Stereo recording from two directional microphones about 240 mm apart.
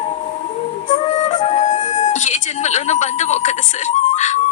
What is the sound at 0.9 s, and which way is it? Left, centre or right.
Music, left.